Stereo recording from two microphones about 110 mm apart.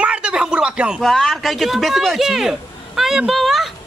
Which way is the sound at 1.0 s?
Centre (ahead or behind).